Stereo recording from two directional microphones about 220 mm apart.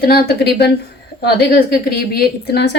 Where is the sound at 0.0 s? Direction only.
45° left (ahead or behind).